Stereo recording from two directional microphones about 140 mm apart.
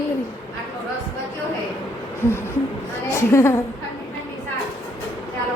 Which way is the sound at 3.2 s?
20° left (ahead or behind).